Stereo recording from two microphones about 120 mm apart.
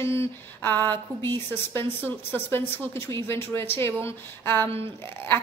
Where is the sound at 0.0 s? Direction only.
20° left (ahead or behind).